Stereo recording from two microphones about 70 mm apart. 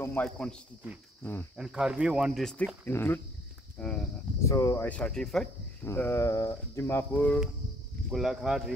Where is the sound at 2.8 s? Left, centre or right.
Left.